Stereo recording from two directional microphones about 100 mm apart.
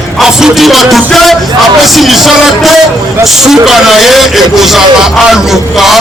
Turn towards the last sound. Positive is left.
turn(degrees=-5)  # may be behind; listen again after turning